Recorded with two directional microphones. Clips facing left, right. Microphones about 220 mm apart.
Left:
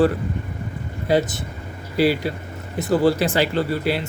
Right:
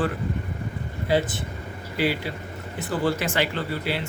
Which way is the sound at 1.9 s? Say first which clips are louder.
Left 6 dB; 40° left (ahead or behind).